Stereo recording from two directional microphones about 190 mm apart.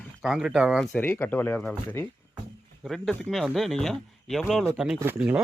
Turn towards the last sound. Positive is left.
turn(degrees=-5)  # may be behind; listen again after turning